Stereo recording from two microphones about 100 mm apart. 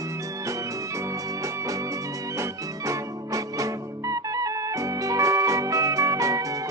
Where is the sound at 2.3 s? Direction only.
30° right (ahead or behind).